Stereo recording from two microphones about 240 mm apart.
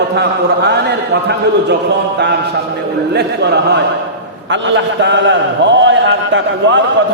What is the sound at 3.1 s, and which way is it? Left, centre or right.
A man's voice, right.